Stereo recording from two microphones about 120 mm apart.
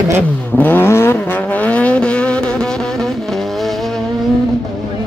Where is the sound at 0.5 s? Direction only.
15° left (ahead or behind).